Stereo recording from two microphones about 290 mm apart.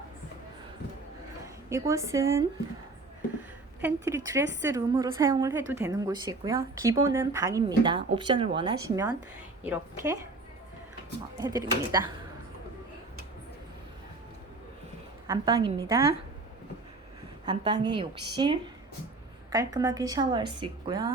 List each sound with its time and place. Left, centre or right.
1.7 s a woman's voice: centre
3.8 s a woman's voice: centre
11.3 s a woman's voice: centre
15.3 s a woman's voice: centre
17.4 s a woman's voice: centre